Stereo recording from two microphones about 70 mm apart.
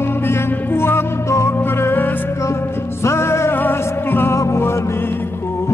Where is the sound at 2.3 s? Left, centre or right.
Left.